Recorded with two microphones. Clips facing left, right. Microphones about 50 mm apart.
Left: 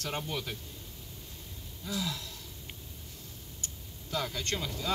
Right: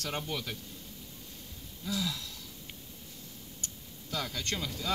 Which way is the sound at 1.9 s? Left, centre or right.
Centre.